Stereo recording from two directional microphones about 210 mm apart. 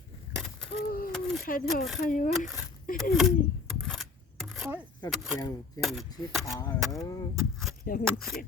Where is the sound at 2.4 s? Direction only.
40° left (ahead or behind).